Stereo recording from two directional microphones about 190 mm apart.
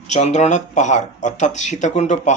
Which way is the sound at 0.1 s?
35° left (ahead or behind).